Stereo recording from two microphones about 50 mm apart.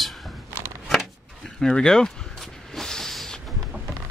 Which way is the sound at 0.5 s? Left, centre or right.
Right.